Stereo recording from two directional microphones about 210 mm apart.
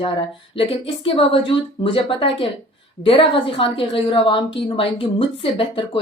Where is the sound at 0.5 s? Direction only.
25° left (ahead or behind).